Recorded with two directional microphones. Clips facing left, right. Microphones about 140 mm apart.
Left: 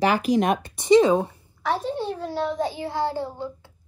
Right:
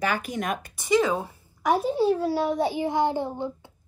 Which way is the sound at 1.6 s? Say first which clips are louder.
Right 4 dB; 10° right (ahead or behind).